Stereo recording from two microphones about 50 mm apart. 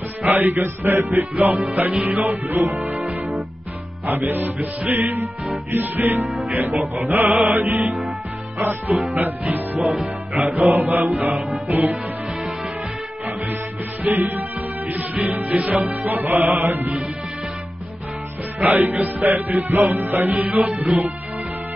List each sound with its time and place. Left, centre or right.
0.2 s music: right
9.8 s music: centre
10.3 s music: right
14.0 s music: right
18.7 s music: right